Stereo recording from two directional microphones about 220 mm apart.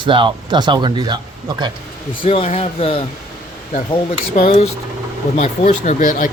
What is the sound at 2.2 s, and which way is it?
Speech, 25° left (ahead or behind).